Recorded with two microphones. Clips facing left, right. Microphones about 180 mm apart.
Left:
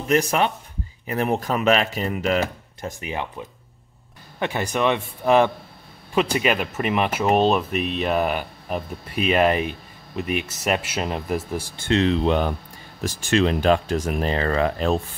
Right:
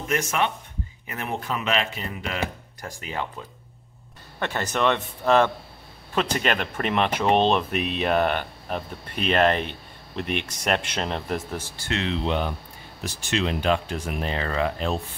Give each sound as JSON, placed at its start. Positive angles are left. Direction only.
{"t": 0.1, "sound": "speech", "side_deg": 35}
{"t": 2.8, "sound": "speech", "side_deg": 20}
{"t": 11.9, "sound": "speech", "side_deg": 40}